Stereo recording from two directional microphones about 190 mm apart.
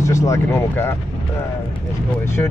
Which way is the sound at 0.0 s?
15° left (ahead or behind).